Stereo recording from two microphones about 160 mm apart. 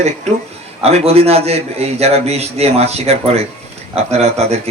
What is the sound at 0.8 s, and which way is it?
A man's voice, 40° right (ahead or behind).